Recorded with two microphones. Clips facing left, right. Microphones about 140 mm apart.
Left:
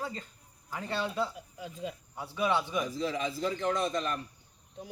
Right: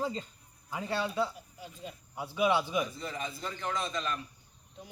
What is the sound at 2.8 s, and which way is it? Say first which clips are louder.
Speech: left 5 dB; 90° left.